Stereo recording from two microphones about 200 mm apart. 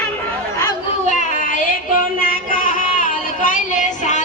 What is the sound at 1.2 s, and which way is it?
Child singing, 40° left (ahead or behind).